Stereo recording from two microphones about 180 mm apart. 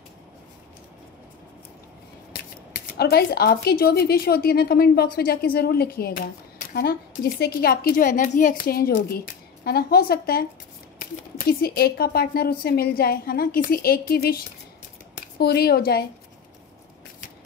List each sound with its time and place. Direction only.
2.3 s speech: 60° left (ahead or behind)